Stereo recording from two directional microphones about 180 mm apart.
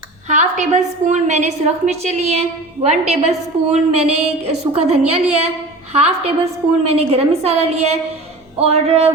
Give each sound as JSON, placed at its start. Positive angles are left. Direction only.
{"t": 0.3, "sound": "a woman's voice", "side_deg": -45}